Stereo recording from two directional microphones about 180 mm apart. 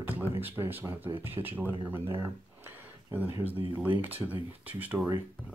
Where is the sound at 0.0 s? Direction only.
10° right (ahead or behind).